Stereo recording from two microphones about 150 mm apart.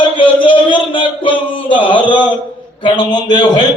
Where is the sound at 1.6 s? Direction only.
35° left (ahead or behind).